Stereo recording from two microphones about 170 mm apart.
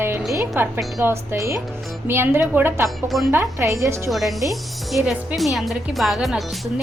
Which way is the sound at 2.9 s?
Centre (ahead or behind).